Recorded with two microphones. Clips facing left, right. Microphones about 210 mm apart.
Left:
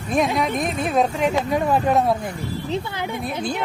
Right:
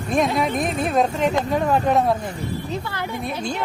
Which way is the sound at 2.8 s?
20° left (ahead or behind).